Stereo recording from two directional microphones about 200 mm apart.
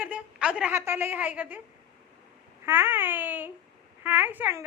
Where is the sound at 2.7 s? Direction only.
10° right (ahead or behind).